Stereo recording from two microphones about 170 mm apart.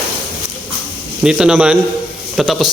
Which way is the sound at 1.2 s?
5° right (ahead or behind).